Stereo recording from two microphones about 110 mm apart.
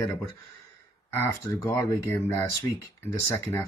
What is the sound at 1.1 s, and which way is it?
Speech, 25° left (ahead or behind).